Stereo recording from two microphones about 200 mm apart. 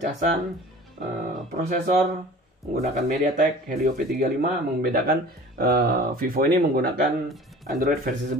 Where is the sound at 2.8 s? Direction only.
40° right (ahead or behind).